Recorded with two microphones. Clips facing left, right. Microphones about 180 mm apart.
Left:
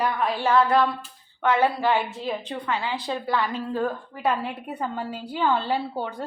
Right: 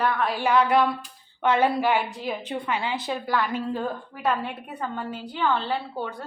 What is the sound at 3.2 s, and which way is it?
A woman's voice, centre (ahead or behind).